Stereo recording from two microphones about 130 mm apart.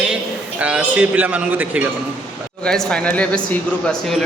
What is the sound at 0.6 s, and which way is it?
A man's voice, 10° right (ahead or behind).